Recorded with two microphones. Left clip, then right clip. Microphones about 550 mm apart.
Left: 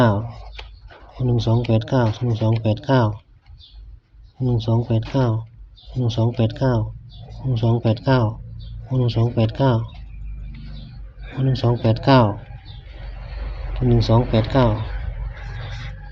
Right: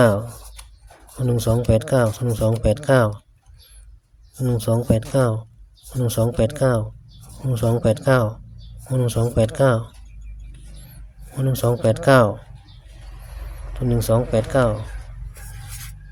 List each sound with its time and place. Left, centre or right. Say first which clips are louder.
0.0 s speech: right 2 dB; right
4.4 s speech: right 3 dB; right
11.3 s speech: right 1 dB; right
13.7 s speech: left 1 dB; right